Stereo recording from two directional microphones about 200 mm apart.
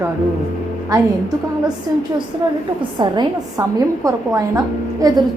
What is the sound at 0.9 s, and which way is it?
A woman's voice, 20° right (ahead or behind).